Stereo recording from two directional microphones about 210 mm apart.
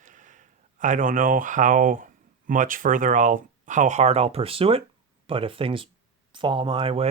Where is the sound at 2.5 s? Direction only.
40° right (ahead or behind).